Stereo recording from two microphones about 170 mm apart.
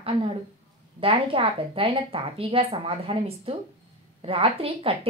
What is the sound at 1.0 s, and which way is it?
A woman's voice, 30° right (ahead or behind).